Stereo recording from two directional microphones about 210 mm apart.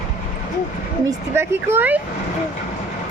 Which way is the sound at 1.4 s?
10° right (ahead or behind).